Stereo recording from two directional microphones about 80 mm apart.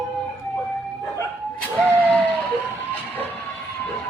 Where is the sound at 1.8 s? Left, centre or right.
Centre.